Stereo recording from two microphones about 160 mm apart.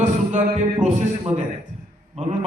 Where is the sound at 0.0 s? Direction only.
50° right (ahead or behind).